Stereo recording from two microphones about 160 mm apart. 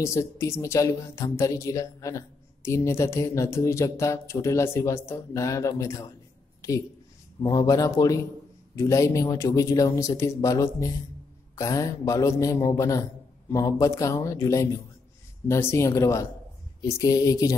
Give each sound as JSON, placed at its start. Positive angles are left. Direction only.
{"t": 0.0, "sound": "speech", "side_deg": 20}
{"t": 7.4, "sound": "speech", "side_deg": 20}